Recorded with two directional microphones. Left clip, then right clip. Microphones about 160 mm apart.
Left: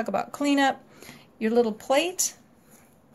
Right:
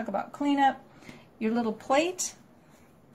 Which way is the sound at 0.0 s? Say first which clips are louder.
Left 4 dB; 50° left (ahead or behind).